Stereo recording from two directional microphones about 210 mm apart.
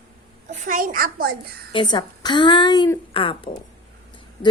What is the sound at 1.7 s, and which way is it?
A woman's voice, 20° left (ahead or behind).